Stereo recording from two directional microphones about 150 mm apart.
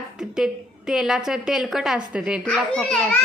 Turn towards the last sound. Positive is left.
turn(degrees=5)  # may be behind; listen again after turning